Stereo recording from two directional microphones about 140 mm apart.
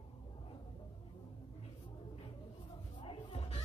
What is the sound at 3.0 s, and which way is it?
Music, 45° left (ahead or behind).